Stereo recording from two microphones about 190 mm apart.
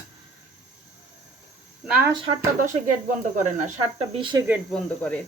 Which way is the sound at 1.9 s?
10° right (ahead or behind).